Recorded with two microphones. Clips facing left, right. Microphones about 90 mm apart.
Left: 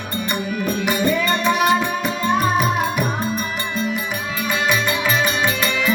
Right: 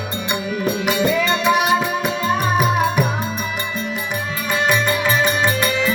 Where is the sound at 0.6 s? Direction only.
15° right (ahead or behind).